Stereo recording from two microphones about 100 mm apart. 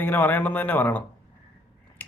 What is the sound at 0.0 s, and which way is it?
Speech, 20° left (ahead or behind).